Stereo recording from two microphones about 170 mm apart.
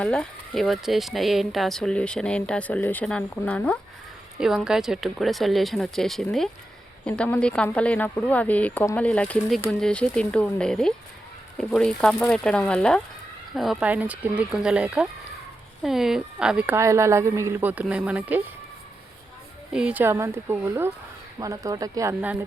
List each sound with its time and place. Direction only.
0.0 s speech: 5° left (ahead or behind)
4.4 s a woman's voice: 5° right (ahead or behind)
19.7 s a woman's voice: 5° right (ahead or behind)